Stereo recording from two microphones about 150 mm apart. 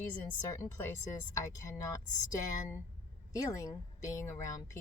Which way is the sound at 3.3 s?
20° left (ahead or behind).